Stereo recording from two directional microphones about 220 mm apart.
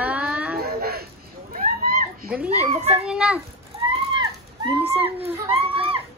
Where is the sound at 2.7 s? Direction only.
30° right (ahead or behind).